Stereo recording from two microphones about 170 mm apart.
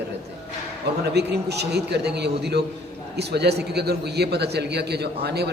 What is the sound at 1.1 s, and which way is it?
A man's voice, 75° right (ahead or behind).